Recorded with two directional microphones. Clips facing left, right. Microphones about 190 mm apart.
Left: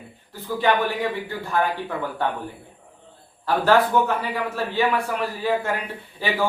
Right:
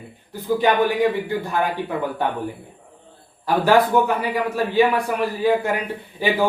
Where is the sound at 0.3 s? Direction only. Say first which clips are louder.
Right 5 dB; 15° right (ahead or behind).